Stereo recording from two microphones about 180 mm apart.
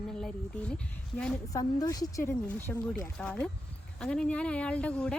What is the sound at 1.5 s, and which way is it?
Speech, 20° left (ahead or behind).